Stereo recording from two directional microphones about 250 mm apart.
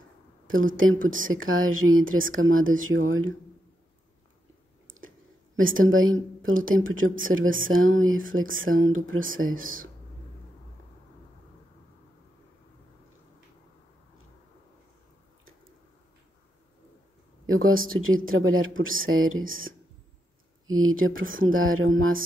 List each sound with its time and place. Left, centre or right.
0.5 s speech: right
5.6 s speech: right
17.5 s speech: right
20.8 s speech: right